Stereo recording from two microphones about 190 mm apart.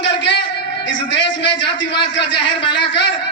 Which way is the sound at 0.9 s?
25° left (ahead or behind).